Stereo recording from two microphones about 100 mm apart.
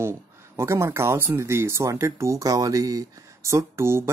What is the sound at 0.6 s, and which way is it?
Speech, 25° right (ahead or behind).